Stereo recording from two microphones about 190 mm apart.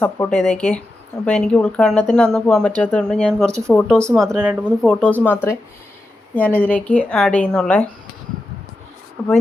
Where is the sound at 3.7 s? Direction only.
5° left (ahead or behind).